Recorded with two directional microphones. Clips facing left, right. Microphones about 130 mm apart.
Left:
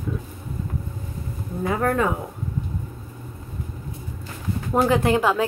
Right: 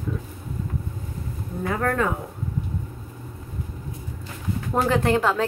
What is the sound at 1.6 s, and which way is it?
Speech, 15° left (ahead or behind).